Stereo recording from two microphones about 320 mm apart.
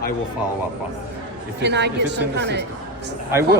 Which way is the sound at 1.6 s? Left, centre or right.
Right.